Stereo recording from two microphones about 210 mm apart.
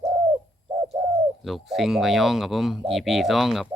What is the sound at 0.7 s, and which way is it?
Bird, 20° right (ahead or behind).